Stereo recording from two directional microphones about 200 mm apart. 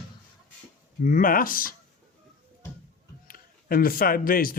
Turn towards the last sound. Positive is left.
turn(degrees=45)  # may be behind; listen again after turning